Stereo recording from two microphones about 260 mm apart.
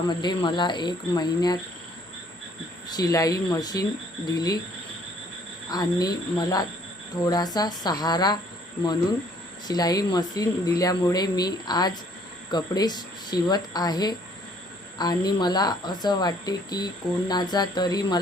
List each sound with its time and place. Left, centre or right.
0.1 s speech: centre
2.8 s speech: centre
5.7 s speech: centre